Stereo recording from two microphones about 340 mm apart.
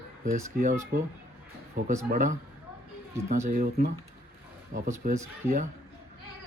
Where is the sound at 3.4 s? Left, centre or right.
Right.